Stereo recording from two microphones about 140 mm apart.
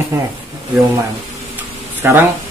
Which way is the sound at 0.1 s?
20° right (ahead or behind).